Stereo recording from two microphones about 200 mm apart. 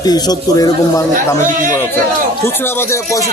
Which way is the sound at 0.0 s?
20° left (ahead or behind).